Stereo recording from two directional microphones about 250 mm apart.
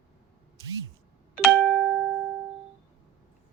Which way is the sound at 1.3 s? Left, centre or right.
Centre.